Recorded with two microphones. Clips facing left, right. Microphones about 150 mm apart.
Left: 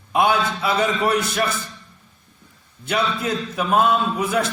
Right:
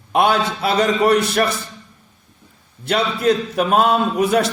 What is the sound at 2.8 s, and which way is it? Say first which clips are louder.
A man's voice: right 6 dB; 65° right (ahead or behind).